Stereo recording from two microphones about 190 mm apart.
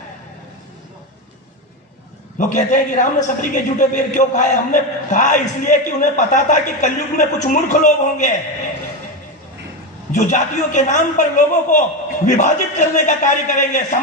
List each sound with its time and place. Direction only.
2.3 s a man's voice: 40° left (ahead or behind)
10.1 s a man's voice: 40° left (ahead or behind)